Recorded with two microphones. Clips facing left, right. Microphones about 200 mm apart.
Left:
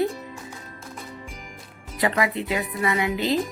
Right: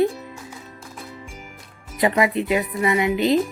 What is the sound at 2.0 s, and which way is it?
A woman's voice, 20° right (ahead or behind).